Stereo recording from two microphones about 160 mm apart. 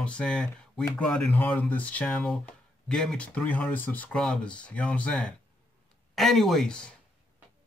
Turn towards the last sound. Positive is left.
turn(degrees=5)  # may be behind; listen again after turning